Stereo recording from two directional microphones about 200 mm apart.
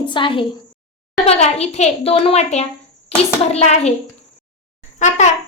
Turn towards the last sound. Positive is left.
turn(degrees=35)  # may be behind; listen again after turning